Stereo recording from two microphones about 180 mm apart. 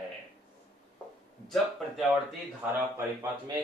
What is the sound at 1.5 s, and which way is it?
Speech, centre (ahead or behind).